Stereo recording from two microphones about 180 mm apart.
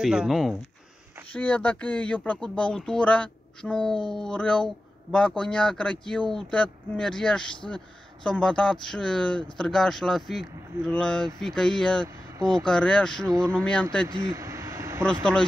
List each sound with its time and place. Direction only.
0.0 s speech: 5° right (ahead or behind)
14.0 s vehicle: 20° right (ahead or behind)